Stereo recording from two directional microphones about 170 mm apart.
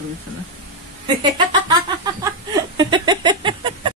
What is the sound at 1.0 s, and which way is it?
Speech, 25° right (ahead or behind).